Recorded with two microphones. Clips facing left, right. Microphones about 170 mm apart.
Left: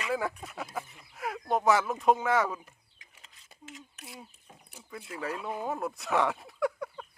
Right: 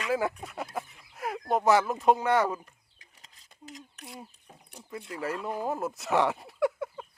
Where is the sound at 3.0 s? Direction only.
40° right (ahead or behind).